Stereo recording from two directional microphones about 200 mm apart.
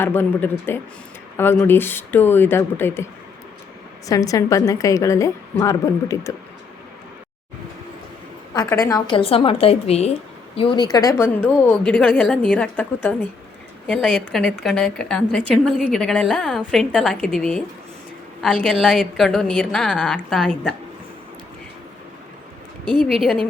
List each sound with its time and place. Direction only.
0.0 s a woman's voice: 10° left (ahead or behind)
8.5 s a woman's voice: 15° left (ahead or behind)
11.9 s a woman's voice: 5° left (ahead or behind)